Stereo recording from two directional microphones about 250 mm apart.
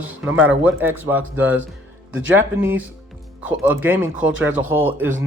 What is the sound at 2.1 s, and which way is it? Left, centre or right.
Speech, right.